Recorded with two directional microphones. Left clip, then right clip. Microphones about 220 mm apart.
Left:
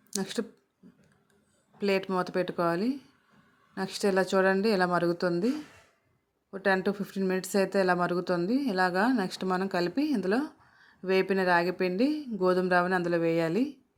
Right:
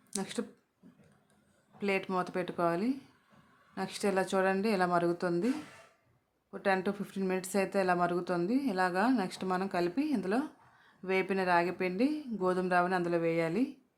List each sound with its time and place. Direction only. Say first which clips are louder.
0.1 s speech: left 5 dB; 20° left (ahead or behind)
1.8 s a woman's voice: left 4 dB; 20° left (ahead or behind)
6.5 s a woman's voice: left 4 dB; 20° left (ahead or behind)